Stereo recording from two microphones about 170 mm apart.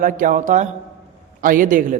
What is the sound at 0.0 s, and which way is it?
A man's voice, 50° right (ahead or behind).